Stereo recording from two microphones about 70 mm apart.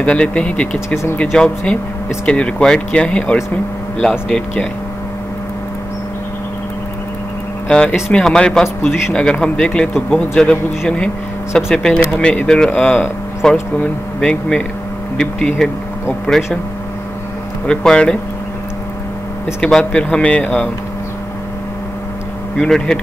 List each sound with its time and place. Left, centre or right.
0.0 s speech: centre
0.8 s speech: left
1.3 s speech: centre
7.6 s speech: centre
15.1 s speech: centre
17.6 s speech: centre
19.6 s speech: centre
22.6 s speech: centre